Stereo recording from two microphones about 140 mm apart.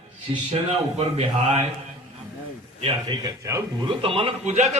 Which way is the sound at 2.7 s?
35° right (ahead or behind).